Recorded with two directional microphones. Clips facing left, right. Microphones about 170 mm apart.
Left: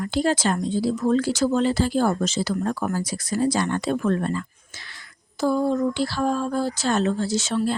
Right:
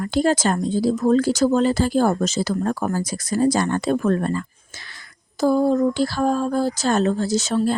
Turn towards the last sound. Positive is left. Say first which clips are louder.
# right 3 dB
turn(degrees=-40)  # may be behind; listen again after turning